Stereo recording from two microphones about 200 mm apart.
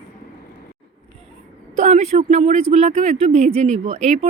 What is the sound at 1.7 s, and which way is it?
Speech, 35° right (ahead or behind).